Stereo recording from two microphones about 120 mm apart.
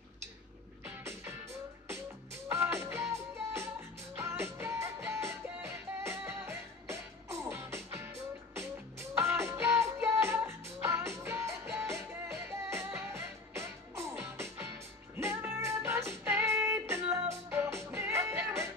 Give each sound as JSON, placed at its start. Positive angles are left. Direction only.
{"t": 0.8, "sound": "music", "side_deg": -20}